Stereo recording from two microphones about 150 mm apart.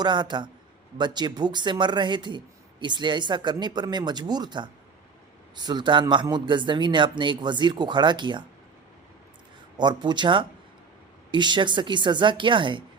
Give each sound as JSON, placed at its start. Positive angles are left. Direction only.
{"t": 0.0, "sound": "speech", "side_deg": -30}
{"t": 9.7, "sound": "speech", "side_deg": -30}